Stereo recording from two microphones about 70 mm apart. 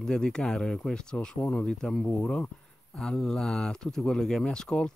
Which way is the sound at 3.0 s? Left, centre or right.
Centre.